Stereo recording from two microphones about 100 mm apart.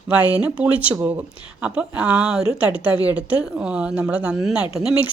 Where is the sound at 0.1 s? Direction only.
15° right (ahead or behind).